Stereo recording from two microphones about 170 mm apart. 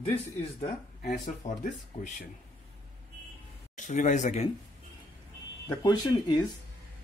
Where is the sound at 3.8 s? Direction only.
45° left (ahead or behind).